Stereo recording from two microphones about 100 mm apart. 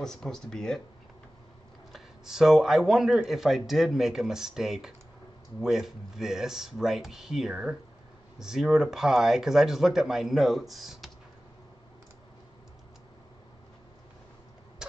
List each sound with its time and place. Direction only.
0.0 s speech: 5° left (ahead or behind)
1.9 s speech: 5° right (ahead or behind)